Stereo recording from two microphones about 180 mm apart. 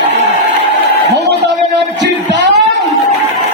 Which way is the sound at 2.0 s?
75° right (ahead or behind).